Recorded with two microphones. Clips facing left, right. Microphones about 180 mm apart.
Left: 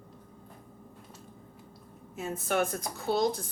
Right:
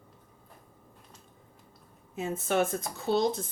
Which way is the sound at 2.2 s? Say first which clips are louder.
Right 2 dB; 25° right (ahead or behind).